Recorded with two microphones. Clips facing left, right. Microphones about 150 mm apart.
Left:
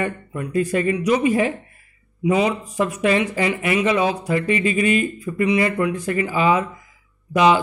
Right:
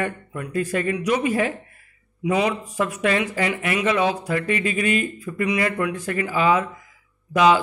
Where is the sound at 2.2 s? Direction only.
5° left (ahead or behind).